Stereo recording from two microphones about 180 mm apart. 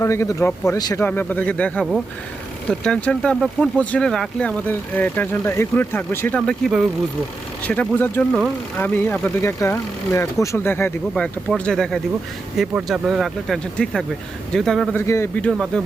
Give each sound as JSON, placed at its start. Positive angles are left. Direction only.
{"t": 0.0, "sound": "speech", "side_deg": 15}
{"t": 14.9, "sound": "speech", "side_deg": 15}